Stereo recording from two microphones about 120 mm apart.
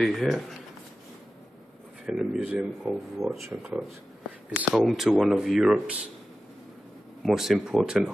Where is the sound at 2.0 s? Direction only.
5° right (ahead or behind).